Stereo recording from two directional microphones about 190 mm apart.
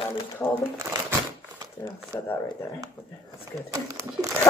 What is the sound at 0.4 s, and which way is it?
Speech, 10° left (ahead or behind).